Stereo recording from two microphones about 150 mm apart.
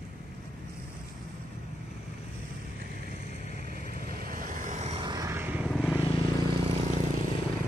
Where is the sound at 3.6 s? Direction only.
80° right; by 5.0 s 50° right (ahead or behind).